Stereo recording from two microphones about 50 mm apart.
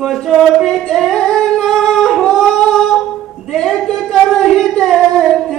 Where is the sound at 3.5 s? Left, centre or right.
Centre.